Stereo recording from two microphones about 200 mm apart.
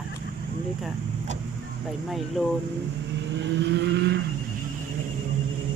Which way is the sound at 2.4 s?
5° right (ahead or behind).